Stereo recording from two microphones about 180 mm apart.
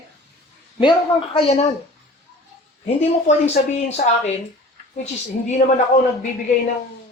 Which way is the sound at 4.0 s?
50° left (ahead or behind).